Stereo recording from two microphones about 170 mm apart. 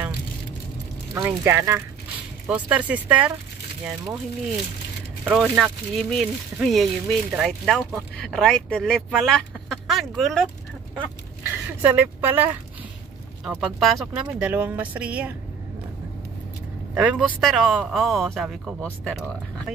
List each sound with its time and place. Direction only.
1.1 s speech: 15° right (ahead or behind)
5.3 s a man's voice: 5° right (ahead or behind)
11.8 s a man's voice: 10° right (ahead or behind)
16.9 s a man's voice: 5° right (ahead or behind)